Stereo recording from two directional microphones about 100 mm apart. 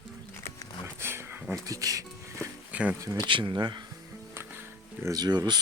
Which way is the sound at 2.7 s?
15° right (ahead or behind).